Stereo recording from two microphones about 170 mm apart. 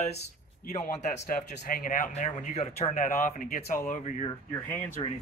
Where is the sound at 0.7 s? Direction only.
45° left (ahead or behind).